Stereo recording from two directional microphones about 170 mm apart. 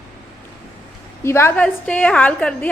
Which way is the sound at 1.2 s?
15° left (ahead or behind).